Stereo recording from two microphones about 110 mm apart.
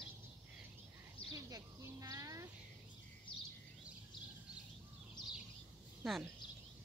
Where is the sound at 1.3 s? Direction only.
30° right (ahead or behind).